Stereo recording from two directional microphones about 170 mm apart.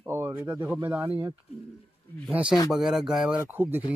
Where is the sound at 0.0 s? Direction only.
15° right (ahead or behind).